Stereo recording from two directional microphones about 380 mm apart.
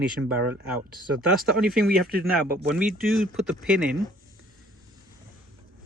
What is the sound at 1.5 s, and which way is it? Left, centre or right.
Speech, centre.